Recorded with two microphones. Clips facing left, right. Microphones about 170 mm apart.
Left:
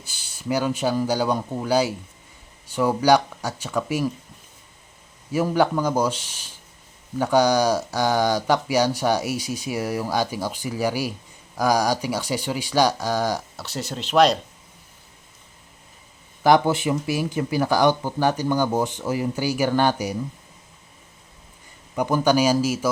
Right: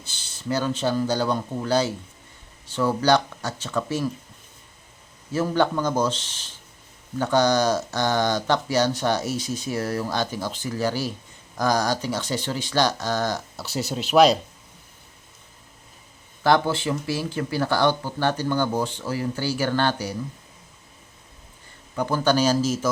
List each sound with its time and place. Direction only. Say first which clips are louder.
0.1 s speech: left 2 dB; 10° left (ahead or behind)
5.3 s speech: left 2 dB; 10° left (ahead or behind)
13.6 s speech: right 3 dB; 5° right (ahead or behind)
16.4 s speech: left 3 dB; 15° left (ahead or behind)
21.9 s speech: left 2 dB; 15° left (ahead or behind)